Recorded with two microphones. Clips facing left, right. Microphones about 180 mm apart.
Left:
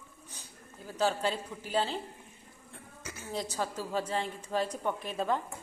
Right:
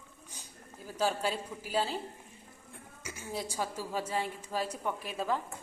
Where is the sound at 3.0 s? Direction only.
10° right (ahead or behind).